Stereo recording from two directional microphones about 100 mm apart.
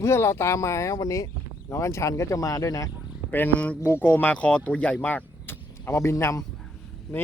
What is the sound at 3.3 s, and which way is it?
Speech, 20° left (ahead or behind).